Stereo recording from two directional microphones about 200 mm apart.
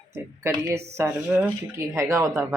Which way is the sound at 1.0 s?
15° right (ahead or behind).